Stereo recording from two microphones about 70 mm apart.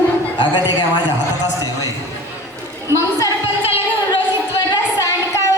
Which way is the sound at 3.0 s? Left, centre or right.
Left.